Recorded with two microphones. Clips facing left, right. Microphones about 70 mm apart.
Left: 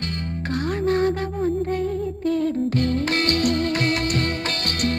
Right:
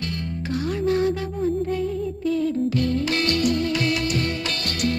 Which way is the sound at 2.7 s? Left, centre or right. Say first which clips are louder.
Left 1 dB; left.